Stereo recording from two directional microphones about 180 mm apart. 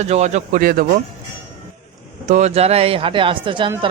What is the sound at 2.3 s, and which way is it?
Speech, 35° right (ahead or behind).